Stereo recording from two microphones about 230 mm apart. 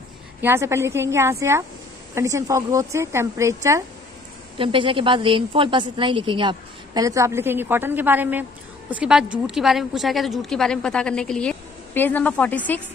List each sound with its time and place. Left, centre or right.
0.4 s a woman's voice: centre